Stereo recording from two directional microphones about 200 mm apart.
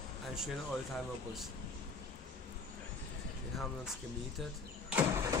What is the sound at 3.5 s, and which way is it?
Speech, centre (ahead or behind).